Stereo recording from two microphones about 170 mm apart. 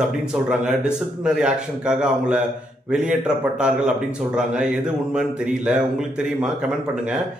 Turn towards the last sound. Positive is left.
turn(degrees=-5)  # may be behind; listen again after turning